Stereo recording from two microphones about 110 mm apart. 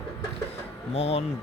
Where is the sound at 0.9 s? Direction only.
65° left (ahead or behind).